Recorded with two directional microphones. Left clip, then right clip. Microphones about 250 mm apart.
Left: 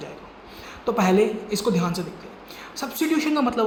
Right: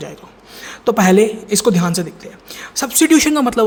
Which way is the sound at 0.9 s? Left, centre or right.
Right.